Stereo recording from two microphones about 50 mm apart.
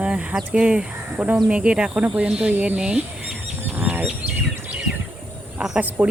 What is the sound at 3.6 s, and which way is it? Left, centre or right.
Fowl, right.